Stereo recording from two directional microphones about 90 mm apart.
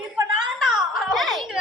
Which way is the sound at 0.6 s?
5° right (ahead or behind).